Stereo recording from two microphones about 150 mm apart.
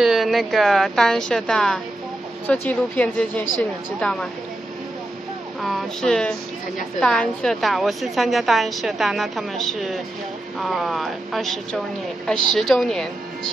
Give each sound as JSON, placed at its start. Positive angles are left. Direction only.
{"t": 0.0, "sound": "a woman's voice", "side_deg": 0}
{"t": 5.6, "sound": "a sound", "side_deg": 0}
{"t": 7.0, "sound": "a woman's voice", "side_deg": 5}